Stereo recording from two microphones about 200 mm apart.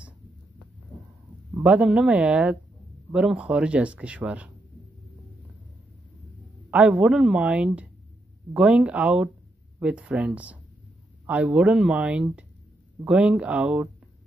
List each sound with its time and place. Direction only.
1.5 s speech: 5° right (ahead or behind)
6.7 s a woman's voice: 5° right (ahead or behind)